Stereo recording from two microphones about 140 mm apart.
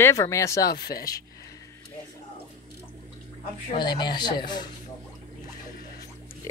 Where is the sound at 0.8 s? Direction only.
90° left.